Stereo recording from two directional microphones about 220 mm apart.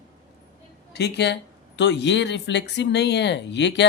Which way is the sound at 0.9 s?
50° left (ahead or behind).